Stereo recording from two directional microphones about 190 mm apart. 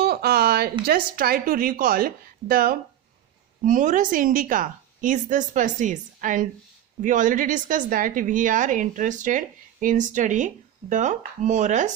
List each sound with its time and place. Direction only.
0.0 s a woman's voice: 55° right (ahead or behind); by 11.9 s 40° right (ahead or behind)